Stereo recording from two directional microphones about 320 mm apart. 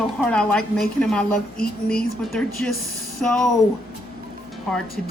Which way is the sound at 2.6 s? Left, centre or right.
Centre.